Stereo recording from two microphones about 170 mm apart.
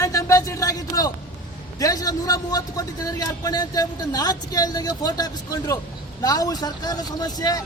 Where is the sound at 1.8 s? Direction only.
20° left (ahead or behind).